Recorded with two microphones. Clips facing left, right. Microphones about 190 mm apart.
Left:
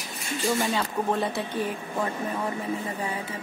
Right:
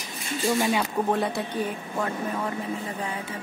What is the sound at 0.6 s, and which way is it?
Speech, 15° right (ahead or behind).